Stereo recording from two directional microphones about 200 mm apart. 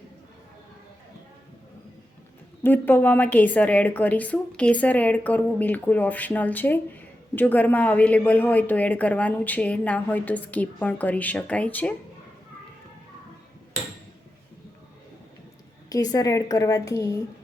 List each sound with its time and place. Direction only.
2.6 s speech: 10° left (ahead or behind)
15.9 s speech: 20° left (ahead or behind)